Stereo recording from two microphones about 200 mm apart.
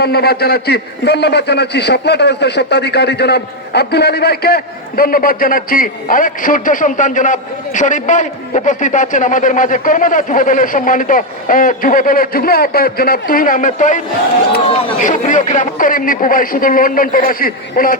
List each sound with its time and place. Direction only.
0.0 s a man's voice: 50° left (ahead or behind)